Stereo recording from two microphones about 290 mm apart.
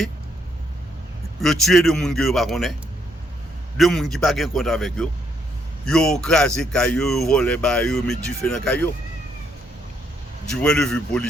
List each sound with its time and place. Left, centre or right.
1.4 s a man's voice: centre
3.8 s a man's voice: centre
10.6 s a man's voice: centre